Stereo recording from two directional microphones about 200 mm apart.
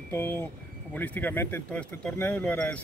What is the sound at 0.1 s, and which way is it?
Speech, 10° left (ahead or behind).